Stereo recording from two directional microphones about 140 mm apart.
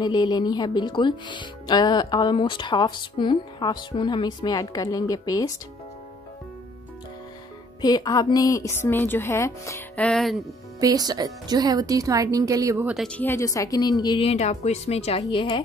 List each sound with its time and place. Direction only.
0.0 s a woman's voice: 30° left (ahead or behind)
7.8 s a woman's voice: 30° left (ahead or behind)
9.9 s speech: 5° left (ahead or behind)
10.8 s speech: 25° right (ahead or behind)
12.8 s speech: centre (ahead or behind)
13.2 s a woman's voice: 20° left (ahead or behind)
14.3 s a woman's voice: 50° left (ahead or behind)